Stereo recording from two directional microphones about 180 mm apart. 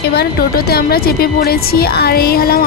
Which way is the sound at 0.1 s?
60° left (ahead or behind).